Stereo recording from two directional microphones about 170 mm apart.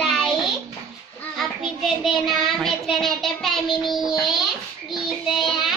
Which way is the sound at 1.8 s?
Centre (ahead or behind).